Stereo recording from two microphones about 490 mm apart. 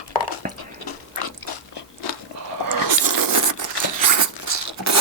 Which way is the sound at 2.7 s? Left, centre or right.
Right.